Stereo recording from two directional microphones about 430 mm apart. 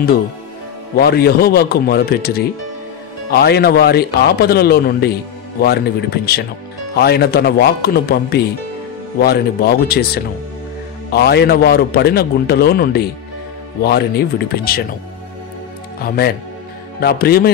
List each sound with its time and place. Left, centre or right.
0.9 s a man's voice: left
16.0 s a man's voice: left